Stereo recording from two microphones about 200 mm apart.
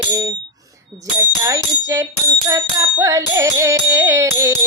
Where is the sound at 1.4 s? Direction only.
15° right (ahead or behind).